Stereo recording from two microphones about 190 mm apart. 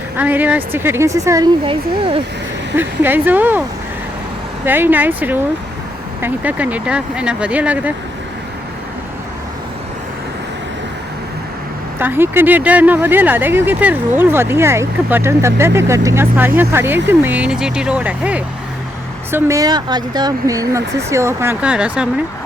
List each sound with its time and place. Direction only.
0.2 s speech: 10° right (ahead or behind)
1.6 s speech: 30° right (ahead or behind)
2.7 s speech: 10° right (ahead or behind)
4.6 s speech: 10° right (ahead or behind)
11.9 s speech: 10° right (ahead or behind)